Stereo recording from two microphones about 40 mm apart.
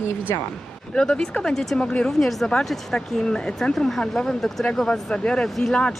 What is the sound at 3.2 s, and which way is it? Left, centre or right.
Speech, left.